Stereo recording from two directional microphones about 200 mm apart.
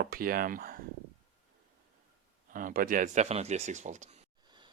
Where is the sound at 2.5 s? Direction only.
40° right (ahead or behind).